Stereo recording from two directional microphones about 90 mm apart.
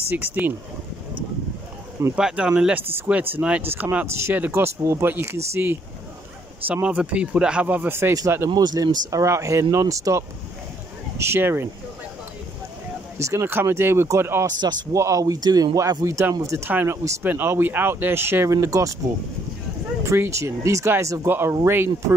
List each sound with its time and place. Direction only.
0.1 s speech: 20° right (ahead or behind)
2.1 s speech: 10° right (ahead or behind); by 5.8 s 25° right (ahead or behind)
6.7 s speech: 15° right (ahead or behind)
8.5 s speech: 50° right (ahead or behind); by 11.7 s 25° right (ahead or behind)
13.2 s speech: 30° right (ahead or behind)
14.4 s speech: 50° right (ahead or behind)
15.0 s speech: 35° right (ahead or behind)
17.2 s speech: 20° right (ahead or behind)
20.1 s speech: 35° right (ahead or behind)